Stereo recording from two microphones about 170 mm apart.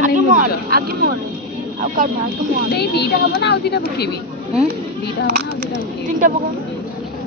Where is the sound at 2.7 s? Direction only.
75° left (ahead or behind).